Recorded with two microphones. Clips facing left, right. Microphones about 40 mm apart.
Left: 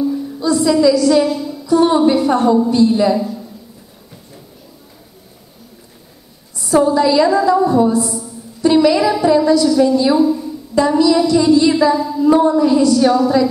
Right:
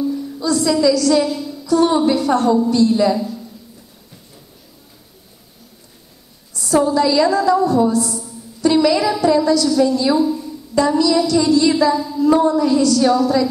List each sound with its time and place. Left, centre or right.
0.0 s a woman's voice: centre
6.5 s a woman's voice: left